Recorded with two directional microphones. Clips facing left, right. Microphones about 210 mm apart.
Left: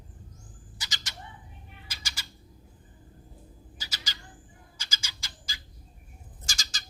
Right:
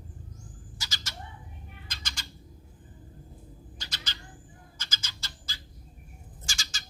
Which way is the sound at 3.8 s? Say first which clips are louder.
Left 1 dB; 5° left (ahead or behind).